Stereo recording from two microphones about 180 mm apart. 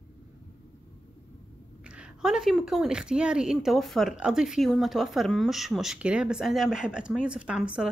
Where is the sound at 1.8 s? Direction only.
5° right (ahead or behind).